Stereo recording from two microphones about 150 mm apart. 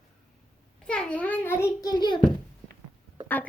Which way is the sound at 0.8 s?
5° left (ahead or behind).